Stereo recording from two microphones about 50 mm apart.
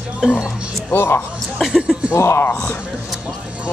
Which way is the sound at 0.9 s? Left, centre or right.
Left.